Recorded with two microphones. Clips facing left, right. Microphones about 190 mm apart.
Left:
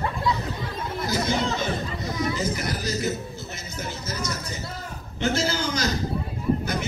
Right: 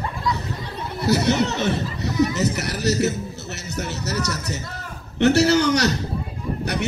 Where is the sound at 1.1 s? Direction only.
70° right (ahead or behind).